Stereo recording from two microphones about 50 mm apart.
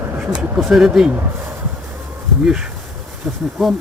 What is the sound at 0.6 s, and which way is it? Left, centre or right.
Speech, centre.